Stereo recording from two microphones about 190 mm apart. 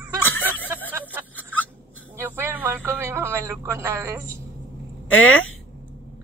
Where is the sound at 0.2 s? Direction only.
10° left (ahead or behind).